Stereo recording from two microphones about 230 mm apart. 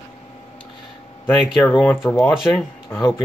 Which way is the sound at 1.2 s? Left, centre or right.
Centre.